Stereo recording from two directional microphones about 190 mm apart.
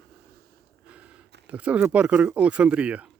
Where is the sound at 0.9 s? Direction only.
5° right (ahead or behind).